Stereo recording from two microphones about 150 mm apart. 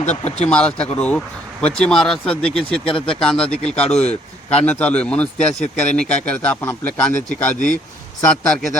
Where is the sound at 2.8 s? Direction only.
35° left (ahead or behind).